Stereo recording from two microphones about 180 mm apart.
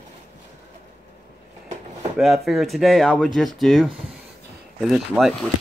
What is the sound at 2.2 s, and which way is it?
Speech, centre (ahead or behind).